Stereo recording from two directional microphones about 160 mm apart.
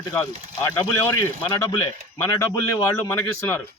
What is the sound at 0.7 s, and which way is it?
Speech, 15° left (ahead or behind).